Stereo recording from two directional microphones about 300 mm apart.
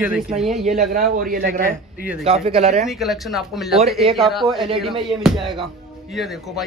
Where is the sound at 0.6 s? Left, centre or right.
Right.